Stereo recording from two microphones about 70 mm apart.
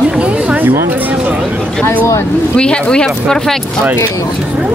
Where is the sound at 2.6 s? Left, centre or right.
Centre.